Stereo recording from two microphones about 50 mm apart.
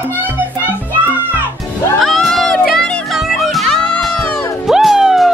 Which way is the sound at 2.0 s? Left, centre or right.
Centre.